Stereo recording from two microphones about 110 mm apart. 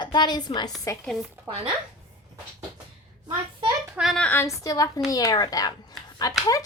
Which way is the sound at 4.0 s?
10° right (ahead or behind).